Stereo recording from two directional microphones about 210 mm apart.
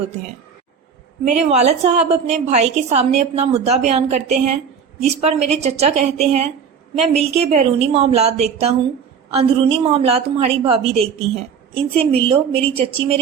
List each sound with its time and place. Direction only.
1.2 s a woman's voice: 35° right (ahead or behind)